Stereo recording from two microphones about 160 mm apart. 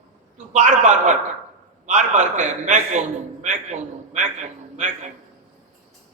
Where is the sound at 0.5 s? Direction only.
50° right (ahead or behind).